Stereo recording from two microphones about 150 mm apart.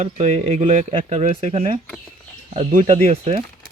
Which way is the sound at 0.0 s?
45° right (ahead or behind).